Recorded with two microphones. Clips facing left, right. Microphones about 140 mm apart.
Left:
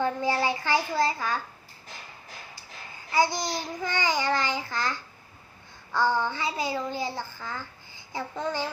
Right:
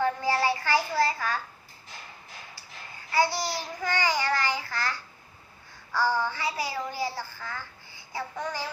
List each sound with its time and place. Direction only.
0.0 s a child's voice: 20° left (ahead or behind)
3.1 s a child's voice: 20° left (ahead or behind)